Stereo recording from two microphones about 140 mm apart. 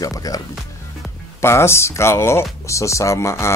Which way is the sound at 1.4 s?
20° left (ahead or behind).